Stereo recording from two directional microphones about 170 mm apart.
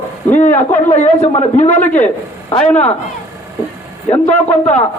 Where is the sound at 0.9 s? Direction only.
40° left (ahead or behind).